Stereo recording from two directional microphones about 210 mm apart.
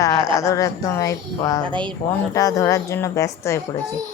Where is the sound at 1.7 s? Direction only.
20° right (ahead or behind).